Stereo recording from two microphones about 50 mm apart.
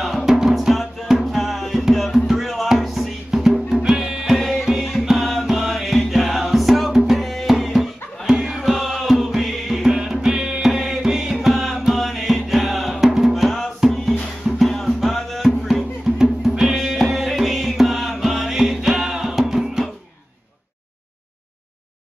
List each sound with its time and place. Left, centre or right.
0.0 s music: centre
13.3 s music: centre